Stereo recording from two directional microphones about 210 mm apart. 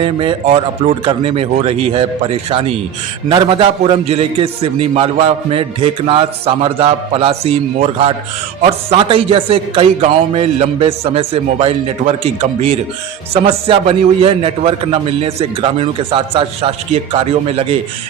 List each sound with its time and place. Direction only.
0.0 s a man's voice: 25° right (ahead or behind)